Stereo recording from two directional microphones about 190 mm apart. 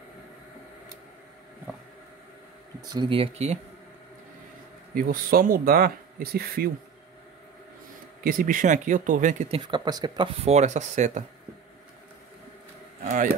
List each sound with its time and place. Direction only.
2.8 s speech: 20° right (ahead or behind)
4.9 s speech: 50° right (ahead or behind)
8.2 s speech: 50° right (ahead or behind)
9.6 s speech: 20° right (ahead or behind); by 11.2 s 40° right (ahead or behind)
13.0 s speech: 40° right (ahead or behind)